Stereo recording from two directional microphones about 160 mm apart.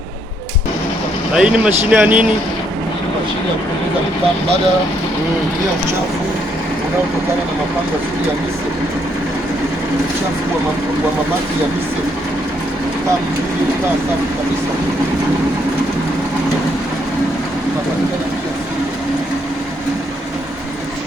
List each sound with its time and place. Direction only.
1.3 s speech: 5° right (ahead or behind)